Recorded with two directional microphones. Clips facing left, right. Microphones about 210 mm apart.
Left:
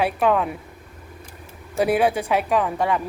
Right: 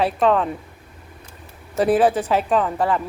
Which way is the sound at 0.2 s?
10° left (ahead or behind).